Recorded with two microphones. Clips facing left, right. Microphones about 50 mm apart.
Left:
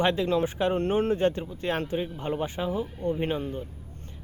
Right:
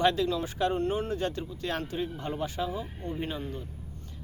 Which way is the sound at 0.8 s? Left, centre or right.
Left.